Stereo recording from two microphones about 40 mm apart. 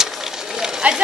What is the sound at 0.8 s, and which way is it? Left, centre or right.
Speech, right.